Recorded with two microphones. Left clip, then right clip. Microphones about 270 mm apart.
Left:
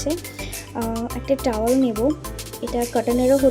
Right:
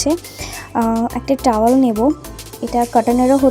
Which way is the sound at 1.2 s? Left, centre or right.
Right.